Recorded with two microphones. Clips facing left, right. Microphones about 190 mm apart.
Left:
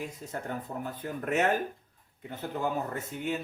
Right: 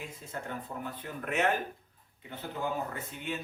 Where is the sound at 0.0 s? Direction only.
40° left (ahead or behind).